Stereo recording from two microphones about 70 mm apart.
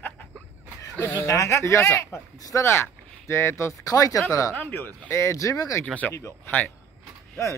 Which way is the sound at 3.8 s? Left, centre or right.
Left.